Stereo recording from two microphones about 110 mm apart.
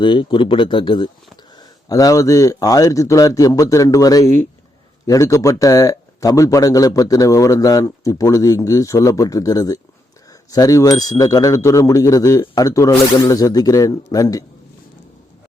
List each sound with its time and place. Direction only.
0.0 s speech: 50° left (ahead or behind)
1.5 s a man's voice: 35° left (ahead or behind)